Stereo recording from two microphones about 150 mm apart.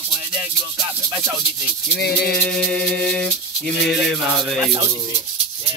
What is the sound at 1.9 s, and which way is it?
Music, 90° left.